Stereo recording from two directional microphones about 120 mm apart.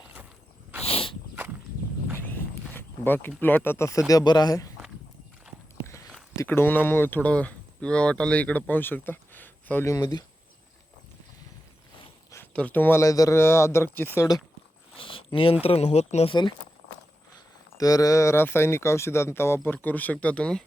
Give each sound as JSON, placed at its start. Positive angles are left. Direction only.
{"t": 0.8, "sound": "cricket", "side_deg": 55}
{"t": 2.1, "sound": "a sound", "side_deg": 15}
{"t": 4.1, "sound": "a man's voice", "side_deg": 35}
{"t": 6.3, "sound": "speech", "side_deg": 20}
{"t": 12.5, "sound": "speech", "side_deg": 15}
{"t": 14.9, "sound": "a sound", "side_deg": 45}
{"t": 15.6, "sound": "speech", "side_deg": 60}
{"t": 16.3, "sound": "a man's voice", "side_deg": 40}
{"t": 17.7, "sound": "speech", "side_deg": 30}